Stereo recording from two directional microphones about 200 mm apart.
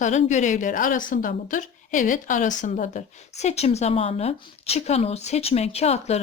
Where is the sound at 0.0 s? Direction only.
35° left (ahead or behind).